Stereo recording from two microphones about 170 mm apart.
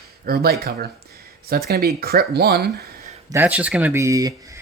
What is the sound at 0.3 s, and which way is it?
Speech, 60° right (ahead or behind).